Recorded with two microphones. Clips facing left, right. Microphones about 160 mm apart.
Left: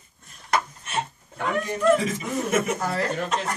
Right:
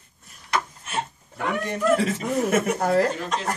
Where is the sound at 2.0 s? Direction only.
65° right (ahead or behind).